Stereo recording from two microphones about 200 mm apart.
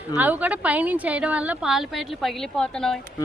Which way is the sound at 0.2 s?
10° right (ahead or behind).